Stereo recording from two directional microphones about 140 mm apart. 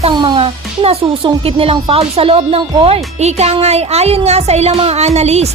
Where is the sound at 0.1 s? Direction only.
30° right (ahead or behind).